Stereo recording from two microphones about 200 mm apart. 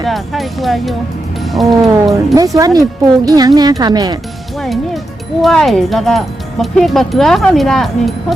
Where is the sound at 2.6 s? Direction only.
20° right (ahead or behind).